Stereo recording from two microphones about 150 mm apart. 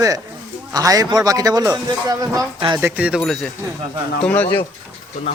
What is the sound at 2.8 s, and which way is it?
Speech, 10° right (ahead or behind).